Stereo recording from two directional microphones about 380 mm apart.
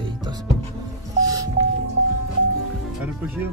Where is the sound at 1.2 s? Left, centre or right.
Centre.